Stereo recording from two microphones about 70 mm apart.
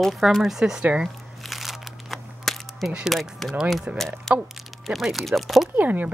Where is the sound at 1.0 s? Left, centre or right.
Centre.